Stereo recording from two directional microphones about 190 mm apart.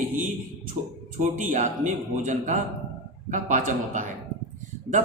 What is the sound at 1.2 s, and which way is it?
A man's voice, 40° right (ahead or behind).